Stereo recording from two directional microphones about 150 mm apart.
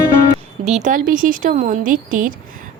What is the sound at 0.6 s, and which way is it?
A woman's voice, 50° right (ahead or behind).